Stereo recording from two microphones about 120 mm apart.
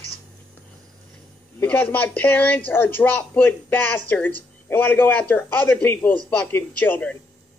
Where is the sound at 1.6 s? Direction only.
15° left (ahead or behind).